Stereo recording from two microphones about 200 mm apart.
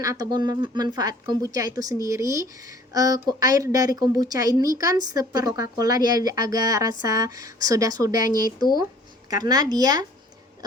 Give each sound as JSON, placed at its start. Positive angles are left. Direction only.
{"t": 0.0, "sound": "speech", "side_deg": -15}
{"t": 6.0, "sound": "speech", "side_deg": 45}
{"t": 6.2, "sound": "speech", "side_deg": -20}
{"t": 8.1, "sound": "speech", "side_deg": 45}
{"t": 9.3, "sound": "speech", "side_deg": -20}